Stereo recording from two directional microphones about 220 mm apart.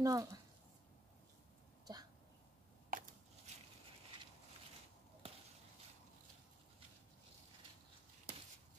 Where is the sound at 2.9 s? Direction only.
40° right (ahead or behind).